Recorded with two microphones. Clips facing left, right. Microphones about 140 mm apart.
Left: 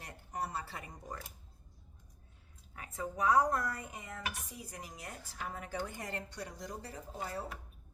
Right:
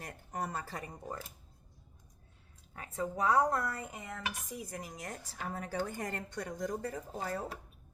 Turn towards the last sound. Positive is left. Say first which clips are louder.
# right 3 dB
turn(degrees=-35)  # may be behind; listen again after turning